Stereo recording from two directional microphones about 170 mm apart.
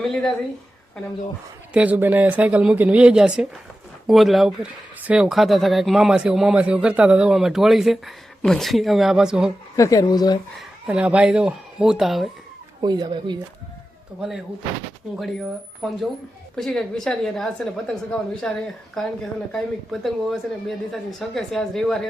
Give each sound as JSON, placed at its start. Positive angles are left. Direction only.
{"t": 0.0, "sound": "speech", "side_deg": 0}
{"t": 1.7, "sound": "speech", "side_deg": -10}
{"t": 9.7, "sound": "speech", "side_deg": 20}
{"t": 10.6, "sound": "speech", "side_deg": -5}
{"t": 12.8, "sound": "speech", "side_deg": -25}
{"t": 14.2, "sound": "speech", "side_deg": 0}